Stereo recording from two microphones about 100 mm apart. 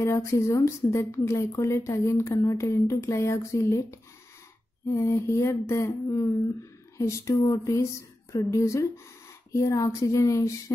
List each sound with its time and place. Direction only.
0.0 s speech: 30° left (ahead or behind)